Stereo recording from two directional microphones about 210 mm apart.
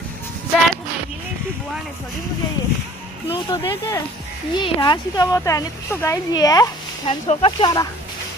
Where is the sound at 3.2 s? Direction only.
25° left (ahead or behind).